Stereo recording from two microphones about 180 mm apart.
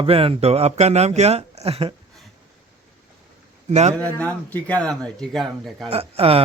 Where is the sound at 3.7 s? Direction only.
40° right (ahead or behind).